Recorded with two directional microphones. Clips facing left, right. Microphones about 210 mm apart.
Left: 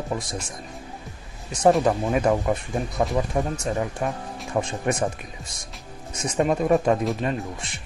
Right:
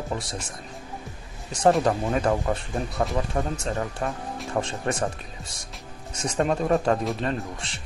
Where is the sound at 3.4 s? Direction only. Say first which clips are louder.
Left 2 dB; 15° left (ahead or behind).